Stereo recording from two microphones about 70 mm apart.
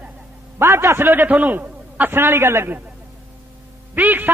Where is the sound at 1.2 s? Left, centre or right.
Right.